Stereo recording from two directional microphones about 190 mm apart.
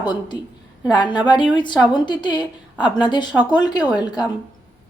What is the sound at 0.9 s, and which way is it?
Speech, 25° left (ahead or behind).